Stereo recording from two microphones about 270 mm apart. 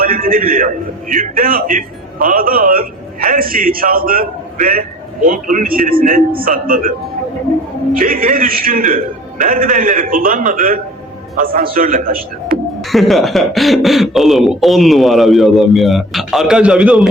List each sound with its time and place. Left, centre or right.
0.0 s a man's voice: right
7.9 s a man's voice: right
12.9 s speech: centre